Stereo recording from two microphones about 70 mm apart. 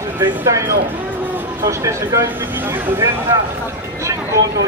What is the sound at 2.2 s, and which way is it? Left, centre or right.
Speech, right.